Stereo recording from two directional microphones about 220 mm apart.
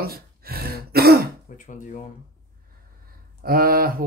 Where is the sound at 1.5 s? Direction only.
35° left (ahead or behind).